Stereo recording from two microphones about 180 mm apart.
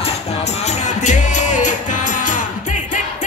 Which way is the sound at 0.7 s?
40° left (ahead or behind).